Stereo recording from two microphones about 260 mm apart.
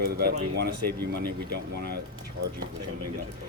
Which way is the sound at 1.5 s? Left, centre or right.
Right.